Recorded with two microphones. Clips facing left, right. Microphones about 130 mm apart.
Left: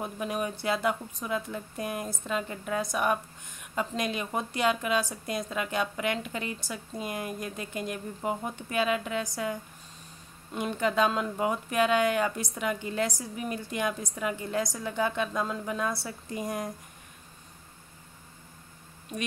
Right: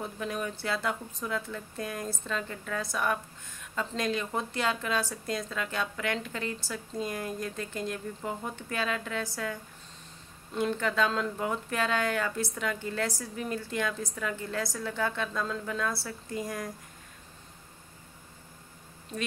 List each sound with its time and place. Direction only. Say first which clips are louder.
0.0 s speech: left 2 dB; 15° left (ahead or behind)